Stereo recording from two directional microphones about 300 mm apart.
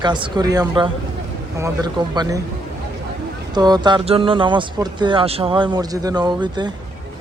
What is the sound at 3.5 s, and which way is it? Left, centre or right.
Speech, centre.